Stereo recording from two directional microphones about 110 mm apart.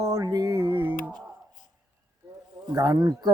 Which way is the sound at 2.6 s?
40° right (ahead or behind).